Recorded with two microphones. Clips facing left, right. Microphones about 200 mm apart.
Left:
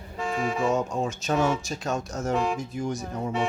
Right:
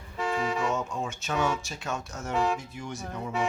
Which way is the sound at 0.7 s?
40° left (ahead or behind).